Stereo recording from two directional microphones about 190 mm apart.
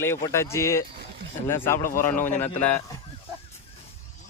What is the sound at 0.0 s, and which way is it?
Speech, 15° left (ahead or behind).